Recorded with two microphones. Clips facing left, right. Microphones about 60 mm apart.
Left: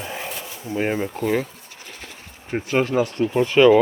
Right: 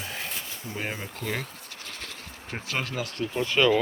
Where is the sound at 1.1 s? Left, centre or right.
Centre.